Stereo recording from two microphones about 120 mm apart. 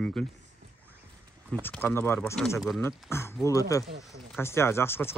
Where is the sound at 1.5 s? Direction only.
15° left (ahead or behind).